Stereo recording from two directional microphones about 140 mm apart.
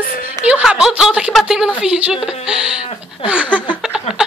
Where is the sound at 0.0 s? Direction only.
90° left.